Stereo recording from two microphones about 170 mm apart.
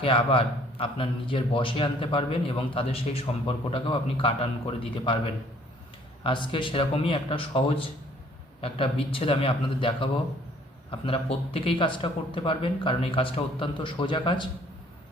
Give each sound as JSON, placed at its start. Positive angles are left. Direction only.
{"t": 0.0, "sound": "a man's voice", "side_deg": 30}